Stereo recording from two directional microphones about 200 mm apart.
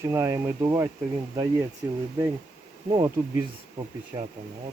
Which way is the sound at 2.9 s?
20° right (ahead or behind).